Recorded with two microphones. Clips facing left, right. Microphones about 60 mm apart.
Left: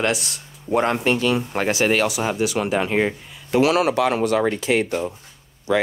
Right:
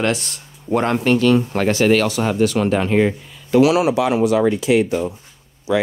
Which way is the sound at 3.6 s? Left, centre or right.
Left.